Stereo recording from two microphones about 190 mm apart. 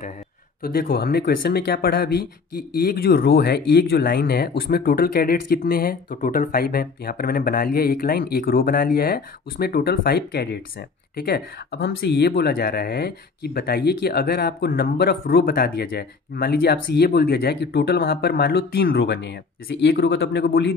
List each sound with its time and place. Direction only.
0.6 s speech: 50° left (ahead or behind)